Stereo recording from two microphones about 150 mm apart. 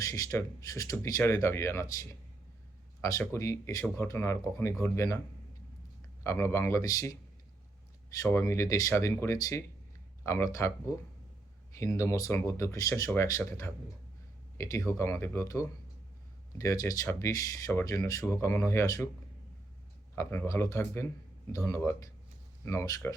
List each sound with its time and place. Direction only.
0.0 s speech: 20° left (ahead or behind)
6.2 s speech: 20° left (ahead or behind)
8.2 s speech: 20° left (ahead or behind)
11.8 s speech: 20° left (ahead or behind)
20.1 s speech: 20° left (ahead or behind)